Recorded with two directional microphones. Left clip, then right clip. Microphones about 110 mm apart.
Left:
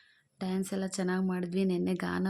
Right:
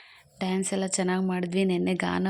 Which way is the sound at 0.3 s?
25° right (ahead or behind).